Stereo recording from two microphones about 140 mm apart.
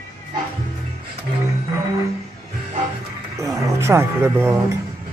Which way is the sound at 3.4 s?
20° right (ahead or behind).